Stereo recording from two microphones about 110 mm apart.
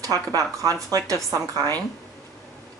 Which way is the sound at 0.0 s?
30° right (ahead or behind).